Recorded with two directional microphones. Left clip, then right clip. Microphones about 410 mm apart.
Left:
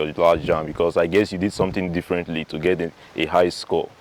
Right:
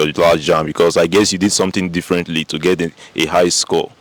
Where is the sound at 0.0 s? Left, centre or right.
Centre.